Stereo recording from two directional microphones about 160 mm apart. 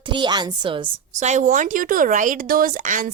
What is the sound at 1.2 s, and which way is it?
Speech, 45° right (ahead or behind).